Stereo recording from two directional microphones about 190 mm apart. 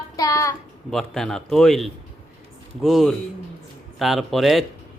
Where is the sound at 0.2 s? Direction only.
15° left (ahead or behind).